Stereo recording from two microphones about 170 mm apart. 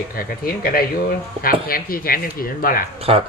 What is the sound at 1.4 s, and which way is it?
Speech, 60° left (ahead or behind).